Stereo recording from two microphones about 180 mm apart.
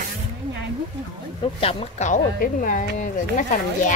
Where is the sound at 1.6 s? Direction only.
30° left (ahead or behind).